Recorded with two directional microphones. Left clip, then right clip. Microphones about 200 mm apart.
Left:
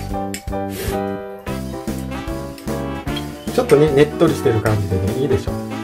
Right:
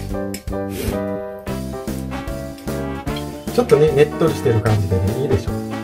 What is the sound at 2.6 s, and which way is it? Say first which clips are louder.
Music: even; centre (ahead or behind).